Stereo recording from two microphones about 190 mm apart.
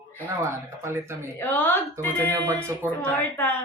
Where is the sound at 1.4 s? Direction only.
10° left (ahead or behind).